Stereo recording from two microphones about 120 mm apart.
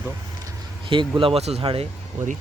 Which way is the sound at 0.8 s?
45° right (ahead or behind).